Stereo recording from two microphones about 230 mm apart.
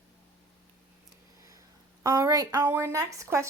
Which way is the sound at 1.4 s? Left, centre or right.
Centre.